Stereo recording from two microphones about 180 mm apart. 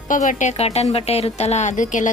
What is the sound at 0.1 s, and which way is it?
Speech, 45° left (ahead or behind).